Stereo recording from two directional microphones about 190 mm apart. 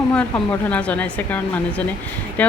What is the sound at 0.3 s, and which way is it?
A woman's voice, 5° left (ahead or behind).